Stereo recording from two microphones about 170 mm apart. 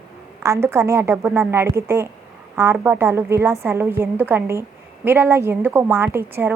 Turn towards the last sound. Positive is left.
turn(degrees=-10)  # may be behind; listen again after turning